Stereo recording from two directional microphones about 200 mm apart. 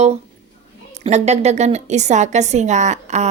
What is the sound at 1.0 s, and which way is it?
A woman's voice, 35° right (ahead or behind).